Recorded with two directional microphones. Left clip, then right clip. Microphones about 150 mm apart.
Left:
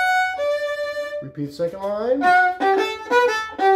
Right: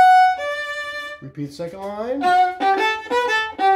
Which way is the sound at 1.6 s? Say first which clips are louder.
Left 5 dB; 10° right (ahead or behind).